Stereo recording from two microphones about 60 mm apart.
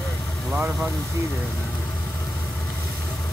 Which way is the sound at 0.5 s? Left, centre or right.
Centre.